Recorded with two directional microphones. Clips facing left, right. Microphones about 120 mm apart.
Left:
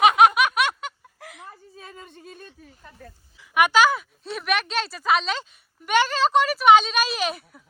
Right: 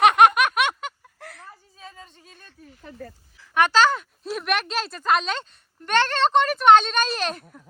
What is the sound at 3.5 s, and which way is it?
Speech, 10° left (ahead or behind).